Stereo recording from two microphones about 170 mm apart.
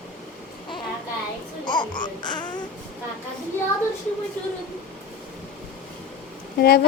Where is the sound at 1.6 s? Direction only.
25° left (ahead or behind).